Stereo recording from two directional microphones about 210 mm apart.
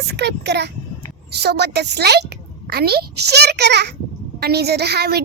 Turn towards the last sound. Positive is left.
turn(degrees=-50)  # may be behind; listen again after turning